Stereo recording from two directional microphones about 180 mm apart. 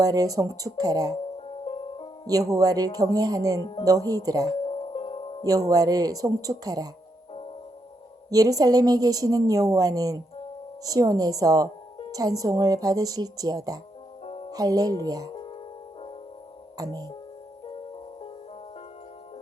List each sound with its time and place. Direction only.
0.0 s a woman's voice: 20° right (ahead or behind)
1.5 s music: 30° left (ahead or behind)
2.2 s a woman's voice: 20° right (ahead or behind)
3.6 s speech: 30° left (ahead or behind)
3.8 s a woman's voice: 20° right (ahead or behind)
4.6 s music: 30° left (ahead or behind)
5.4 s a woman's voice: 20° right (ahead or behind)
8.3 s a woman's voice: 20° right (ahead or behind)
14.3 s music: 30° left (ahead or behind)
14.5 s a woman's voice: 20° right (ahead or behind)
16.7 s speech: 20° right (ahead or behind)